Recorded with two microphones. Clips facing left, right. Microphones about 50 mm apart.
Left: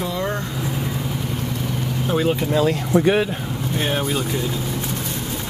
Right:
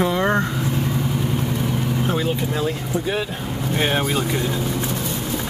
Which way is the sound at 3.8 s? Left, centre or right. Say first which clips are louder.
Right 2 dB; right.